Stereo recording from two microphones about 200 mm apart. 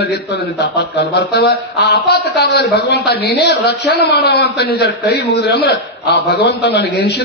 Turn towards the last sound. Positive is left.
turn(degrees=55)  # may be behind; listen again after turning